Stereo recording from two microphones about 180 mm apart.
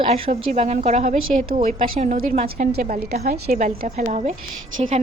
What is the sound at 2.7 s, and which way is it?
A woman's voice, 60° right (ahead or behind).